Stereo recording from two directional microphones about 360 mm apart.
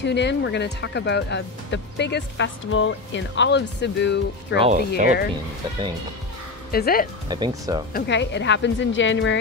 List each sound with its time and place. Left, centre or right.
0.0 s speech: left
4.6 s speech: centre
6.7 s speech: left
7.2 s speech: centre
7.9 s a woman's voice: left